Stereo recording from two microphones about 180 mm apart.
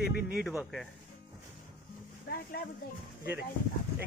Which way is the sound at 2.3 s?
55° left (ahead or behind).